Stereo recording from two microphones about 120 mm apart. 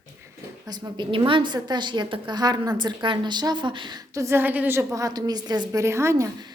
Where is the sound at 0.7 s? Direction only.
35° right (ahead or behind).